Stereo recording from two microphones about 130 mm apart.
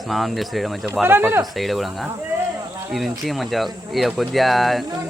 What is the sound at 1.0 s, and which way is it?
Speech, 15° right (ahead or behind).